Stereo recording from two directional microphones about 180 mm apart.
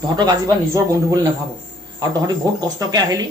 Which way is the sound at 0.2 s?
20° right (ahead or behind).